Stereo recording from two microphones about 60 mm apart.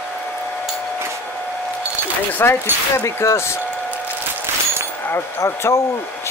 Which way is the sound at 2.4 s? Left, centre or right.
Left.